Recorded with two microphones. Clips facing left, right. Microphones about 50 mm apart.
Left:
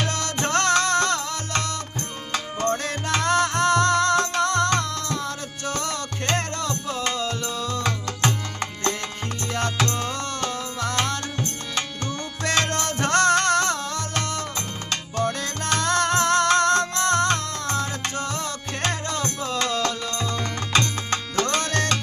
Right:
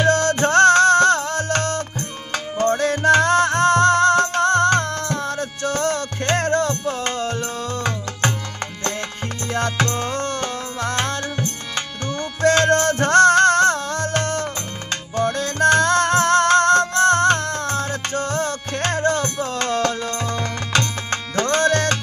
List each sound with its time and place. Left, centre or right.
0.1 s music: right
9.5 s music: right
20.1 s music: right
20.3 s music: right